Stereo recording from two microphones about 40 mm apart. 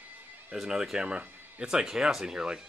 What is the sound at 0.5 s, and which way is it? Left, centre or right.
Speech, centre.